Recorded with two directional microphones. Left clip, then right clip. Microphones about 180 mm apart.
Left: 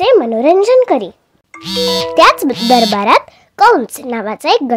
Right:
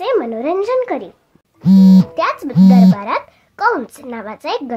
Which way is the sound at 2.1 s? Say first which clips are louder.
Left 9 dB; 45° left (ahead or behind).